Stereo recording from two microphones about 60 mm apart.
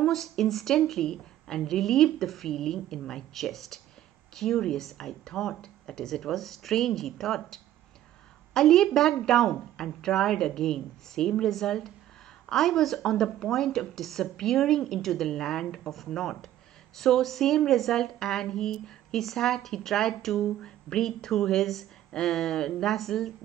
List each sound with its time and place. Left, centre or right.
0.0 s a woman's voice: centre